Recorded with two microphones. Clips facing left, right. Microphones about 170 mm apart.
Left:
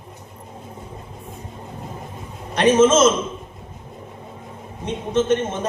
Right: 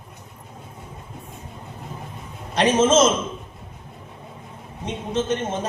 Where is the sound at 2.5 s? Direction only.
55° left (ahead or behind).